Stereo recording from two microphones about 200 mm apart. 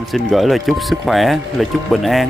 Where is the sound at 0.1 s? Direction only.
Centre (ahead or behind).